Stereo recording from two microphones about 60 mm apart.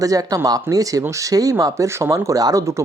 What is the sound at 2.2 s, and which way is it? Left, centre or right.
Speech, right.